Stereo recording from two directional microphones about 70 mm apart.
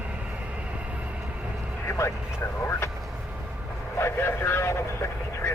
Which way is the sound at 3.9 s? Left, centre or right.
Left.